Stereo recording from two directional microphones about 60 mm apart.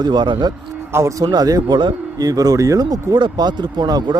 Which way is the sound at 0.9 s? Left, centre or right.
Right.